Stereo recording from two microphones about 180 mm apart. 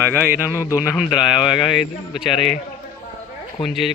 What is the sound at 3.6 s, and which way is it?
Speech, centre (ahead or behind).